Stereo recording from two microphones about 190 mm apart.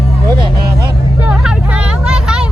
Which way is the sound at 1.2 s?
5° right (ahead or behind).